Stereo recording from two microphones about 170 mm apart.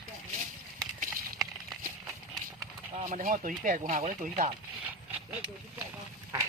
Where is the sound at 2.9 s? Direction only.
45° right (ahead or behind).